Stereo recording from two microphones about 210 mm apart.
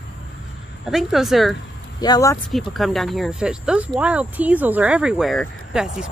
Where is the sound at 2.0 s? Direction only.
15° left (ahead or behind).